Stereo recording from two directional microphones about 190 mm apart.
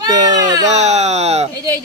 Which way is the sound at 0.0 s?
20° right (ahead or behind).